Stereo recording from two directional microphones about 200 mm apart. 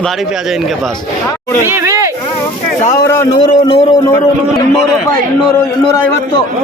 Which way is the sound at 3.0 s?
15° left (ahead or behind).